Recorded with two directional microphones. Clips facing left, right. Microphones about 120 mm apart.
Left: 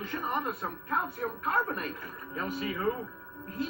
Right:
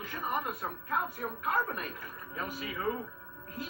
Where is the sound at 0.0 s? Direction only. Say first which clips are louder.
Left 2 dB; 35° left (ahead or behind).